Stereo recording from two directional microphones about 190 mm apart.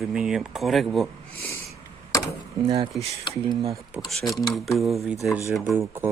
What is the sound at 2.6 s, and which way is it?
Speech, 20° right (ahead or behind).